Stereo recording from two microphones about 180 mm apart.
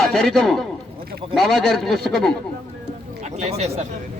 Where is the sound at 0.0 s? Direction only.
Centre (ahead or behind).